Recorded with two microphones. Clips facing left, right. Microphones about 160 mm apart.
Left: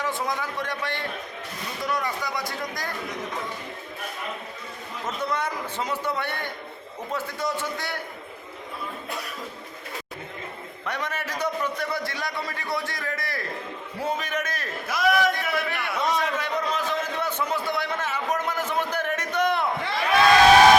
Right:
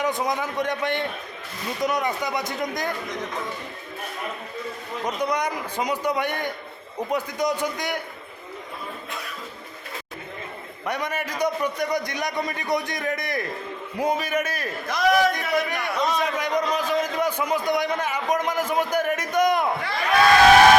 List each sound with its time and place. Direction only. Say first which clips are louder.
0.0 s a man's voice: right 4 dB; 20° right (ahead or behind)
5.0 s a man's voice: right 3 dB; 15° right (ahead or behind)
10.8 s a man's voice: right 3 dB; 10° right (ahead or behind)
14.8 s a man's voice: right 2 dB; 5° left (ahead or behind)
15.1 s a man's voice: right 3 dB; 15° right (ahead or behind)